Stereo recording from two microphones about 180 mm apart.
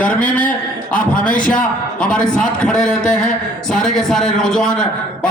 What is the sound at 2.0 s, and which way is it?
A man's voice, 5° left (ahead or behind).